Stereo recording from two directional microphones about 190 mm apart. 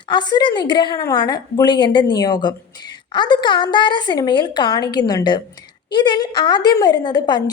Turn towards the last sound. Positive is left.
turn(degrees=25)  # may be behind; listen again after turning